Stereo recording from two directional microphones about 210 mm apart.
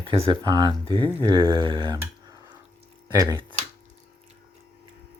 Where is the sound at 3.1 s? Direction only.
15° right (ahead or behind).